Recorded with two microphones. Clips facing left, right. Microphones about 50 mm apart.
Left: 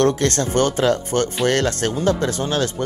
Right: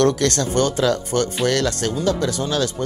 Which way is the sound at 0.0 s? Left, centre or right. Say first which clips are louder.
Even; left.